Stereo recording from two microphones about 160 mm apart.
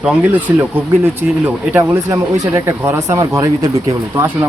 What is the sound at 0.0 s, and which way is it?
Speech, 10° right (ahead or behind).